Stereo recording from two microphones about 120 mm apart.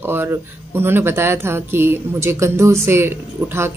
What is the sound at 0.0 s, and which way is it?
Speech, 20° right (ahead or behind).